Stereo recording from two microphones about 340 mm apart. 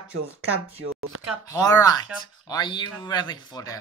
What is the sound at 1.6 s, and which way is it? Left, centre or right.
Speech, centre.